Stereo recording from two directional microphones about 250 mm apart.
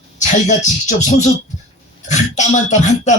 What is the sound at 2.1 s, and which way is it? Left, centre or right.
A man's voice, left.